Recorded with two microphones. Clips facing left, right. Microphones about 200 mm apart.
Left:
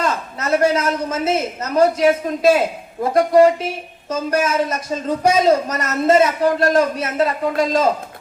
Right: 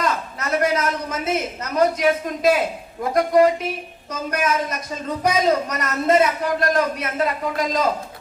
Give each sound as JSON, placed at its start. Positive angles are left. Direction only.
{"t": 0.0, "sound": "a man's voice", "side_deg": 30}